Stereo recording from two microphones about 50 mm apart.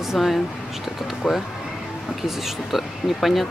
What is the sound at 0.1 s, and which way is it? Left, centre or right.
Speech, centre.